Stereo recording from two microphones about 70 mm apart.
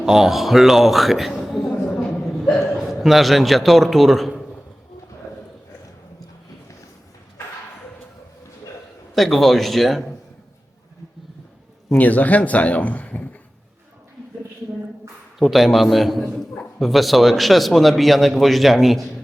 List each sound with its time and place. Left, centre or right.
0.0 s a man's voice: centre
1.9 s hiccup: centre
9.1 s a man's voice: centre
11.9 s speech: left
15.4 s a man's voice: centre